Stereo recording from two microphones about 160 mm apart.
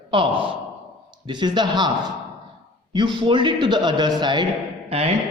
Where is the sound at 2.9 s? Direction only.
30° right (ahead or behind).